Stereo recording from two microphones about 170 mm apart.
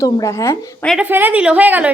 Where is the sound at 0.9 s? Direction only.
10° right (ahead or behind).